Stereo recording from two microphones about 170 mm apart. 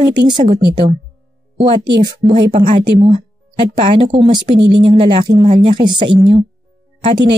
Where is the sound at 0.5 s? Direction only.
30° right (ahead or behind).